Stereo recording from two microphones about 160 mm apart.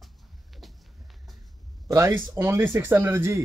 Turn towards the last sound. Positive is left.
turn(degrees=-15)  # may be behind; listen again after turning